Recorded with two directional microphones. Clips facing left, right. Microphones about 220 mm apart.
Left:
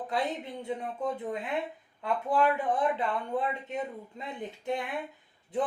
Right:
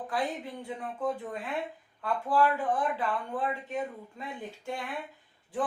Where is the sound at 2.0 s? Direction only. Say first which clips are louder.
Even; 20° left (ahead or behind).